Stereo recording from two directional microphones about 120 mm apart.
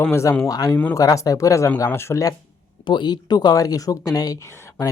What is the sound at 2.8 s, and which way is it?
Speech, 40° left (ahead or behind).